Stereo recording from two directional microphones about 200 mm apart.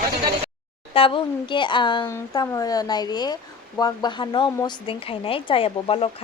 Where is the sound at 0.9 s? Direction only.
25° left (ahead or behind).